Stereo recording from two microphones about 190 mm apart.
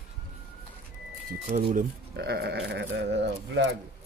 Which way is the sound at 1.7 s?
50° right (ahead or behind).